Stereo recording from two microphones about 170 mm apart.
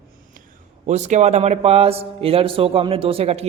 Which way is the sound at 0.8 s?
45° right (ahead or behind).